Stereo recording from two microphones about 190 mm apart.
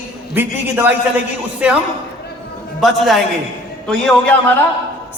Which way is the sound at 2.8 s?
Centre (ahead or behind).